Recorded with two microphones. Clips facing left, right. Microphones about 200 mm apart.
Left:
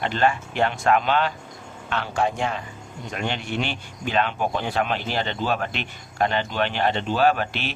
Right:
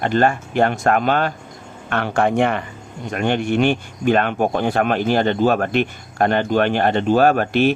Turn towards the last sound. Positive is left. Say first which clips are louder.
# right 7 dB
turn(degrees=-50)  # may be behind; listen again after turning